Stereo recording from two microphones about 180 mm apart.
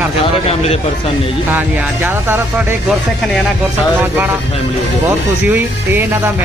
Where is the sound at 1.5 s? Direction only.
10° right (ahead or behind).